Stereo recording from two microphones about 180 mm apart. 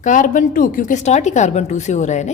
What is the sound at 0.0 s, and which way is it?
A woman's voice, 45° left (ahead or behind).